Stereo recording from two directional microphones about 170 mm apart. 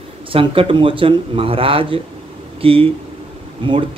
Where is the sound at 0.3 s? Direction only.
30° right (ahead or behind).